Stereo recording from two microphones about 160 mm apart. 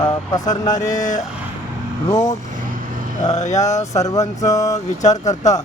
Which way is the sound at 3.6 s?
20° left (ahead or behind).